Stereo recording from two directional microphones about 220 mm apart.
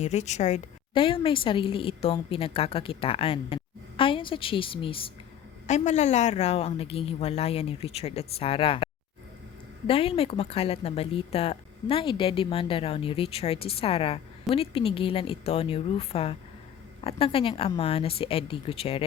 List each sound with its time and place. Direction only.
0.0 s speech: 30° left (ahead or behind)